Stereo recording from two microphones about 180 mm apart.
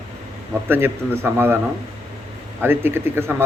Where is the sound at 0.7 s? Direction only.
10° right (ahead or behind).